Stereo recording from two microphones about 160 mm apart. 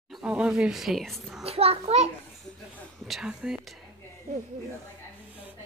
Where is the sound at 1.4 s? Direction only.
40° right (ahead or behind).